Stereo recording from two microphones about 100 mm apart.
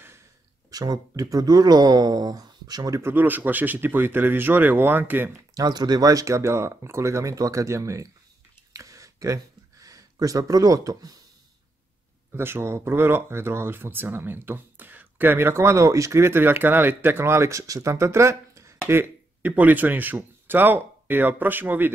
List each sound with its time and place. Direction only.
0.7 s speech: 40° right (ahead or behind)
3.0 s speech: 20° right (ahead or behind)
5.5 s speech: 40° right (ahead or behind)
8.7 s a sound: 35° right (ahead or behind)
12.3 s speech: 25° right (ahead or behind)